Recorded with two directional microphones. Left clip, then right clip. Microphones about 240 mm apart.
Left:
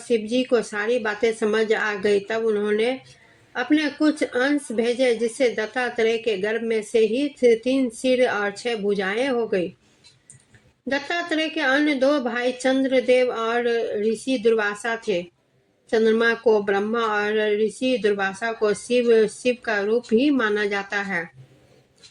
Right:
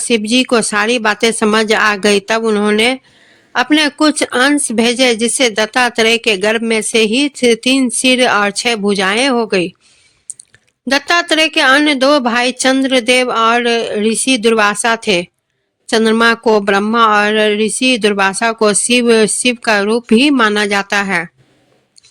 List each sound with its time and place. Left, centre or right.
0.1 s speech: right
10.8 s speech: right